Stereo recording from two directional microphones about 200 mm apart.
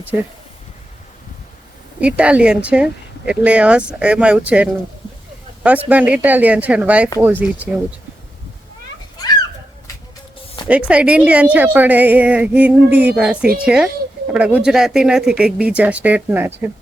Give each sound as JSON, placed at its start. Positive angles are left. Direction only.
{"t": 2.0, "sound": "a woman's voice", "side_deg": -5}
{"t": 10.7, "sound": "a woman's voice", "side_deg": -5}